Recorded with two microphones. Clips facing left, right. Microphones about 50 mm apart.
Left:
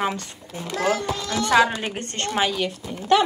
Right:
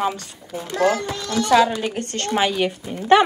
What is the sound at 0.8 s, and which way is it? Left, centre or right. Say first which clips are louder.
A woman's voice: right 3 dB; centre.